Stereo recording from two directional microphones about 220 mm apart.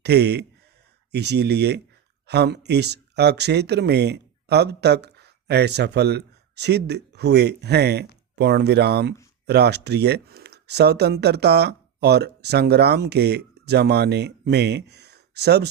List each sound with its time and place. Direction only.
0.0 s speech: 50° right (ahead or behind)